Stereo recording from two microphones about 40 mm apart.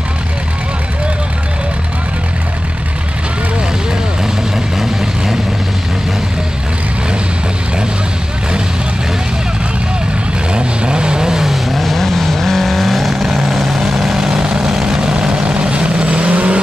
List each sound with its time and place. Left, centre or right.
4.7 s vehicle: centre
10.5 s vehicle: right
11.5 s vehicle: centre
14.2 s vehicle: right
15.0 s vehicle: right